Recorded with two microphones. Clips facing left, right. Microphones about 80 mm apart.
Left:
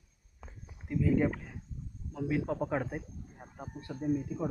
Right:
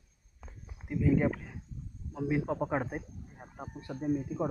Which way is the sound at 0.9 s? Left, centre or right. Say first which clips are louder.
Right 1 dB; centre.